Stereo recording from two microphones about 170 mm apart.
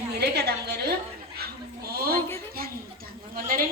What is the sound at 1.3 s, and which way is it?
Dog, 65° right (ahead or behind).